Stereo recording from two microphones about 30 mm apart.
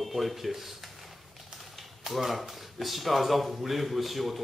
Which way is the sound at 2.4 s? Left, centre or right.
Centre.